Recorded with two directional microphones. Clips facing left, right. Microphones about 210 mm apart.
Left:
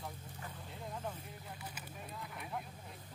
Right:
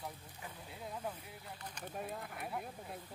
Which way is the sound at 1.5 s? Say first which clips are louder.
Left 1 dB; 5° left (ahead or behind).